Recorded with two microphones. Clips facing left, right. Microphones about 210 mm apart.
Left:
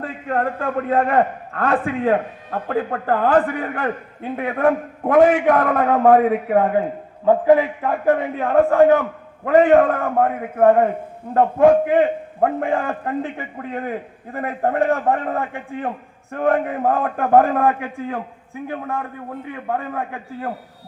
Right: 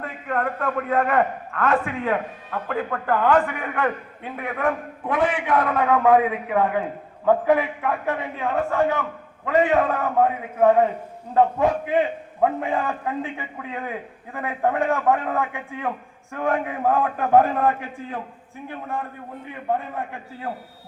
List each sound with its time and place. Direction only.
0.0 s a man's voice: 30° left (ahead or behind)
7.3 s a man's voice: 30° left (ahead or behind)
8.0 s a man's voice: 50° left (ahead or behind)